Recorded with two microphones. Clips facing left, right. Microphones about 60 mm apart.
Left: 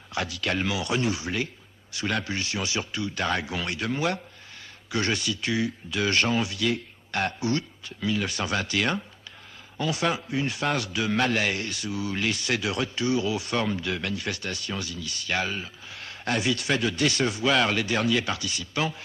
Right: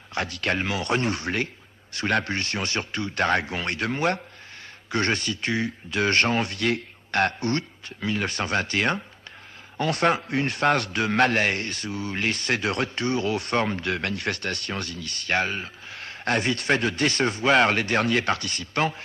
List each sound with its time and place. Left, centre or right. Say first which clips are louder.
0.1 s a man's voice: right 2 dB; right
9.8 s a man's voice: right 4 dB; right